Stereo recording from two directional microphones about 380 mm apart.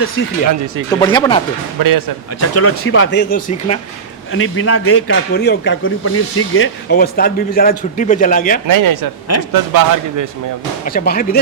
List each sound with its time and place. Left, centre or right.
0.9 s speech: centre
1.8 s speech: right
2.4 s a man's voice: left
4.3 s a man's voice: left
8.6 s speech: right
10.8 s a man's voice: left